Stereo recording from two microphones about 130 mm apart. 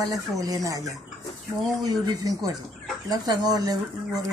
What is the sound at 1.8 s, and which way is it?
Speech, 30° right (ahead or behind).